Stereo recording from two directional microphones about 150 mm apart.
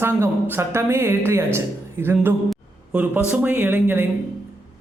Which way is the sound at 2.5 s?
10° right (ahead or behind).